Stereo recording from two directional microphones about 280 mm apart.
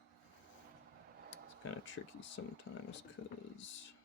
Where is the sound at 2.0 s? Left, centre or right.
Left.